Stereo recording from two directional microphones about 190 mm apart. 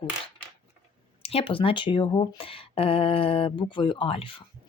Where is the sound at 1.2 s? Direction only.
30° left (ahead or behind).